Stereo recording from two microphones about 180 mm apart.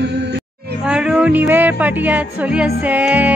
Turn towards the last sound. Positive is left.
turn(degrees=-10)  # may be behind; listen again after turning